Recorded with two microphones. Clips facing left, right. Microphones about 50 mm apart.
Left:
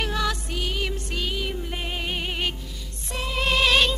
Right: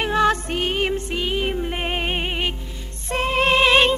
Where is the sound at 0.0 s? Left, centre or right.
Right.